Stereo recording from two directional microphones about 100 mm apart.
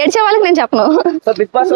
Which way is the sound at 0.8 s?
35° right (ahead or behind).